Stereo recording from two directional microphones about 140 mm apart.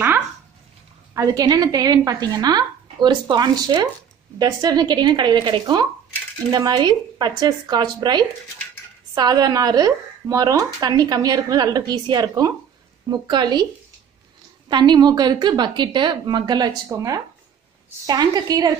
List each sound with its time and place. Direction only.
1.1 s a woman's voice: 25° right (ahead or behind)
14.7 s a woman's voice: 35° right (ahead or behind)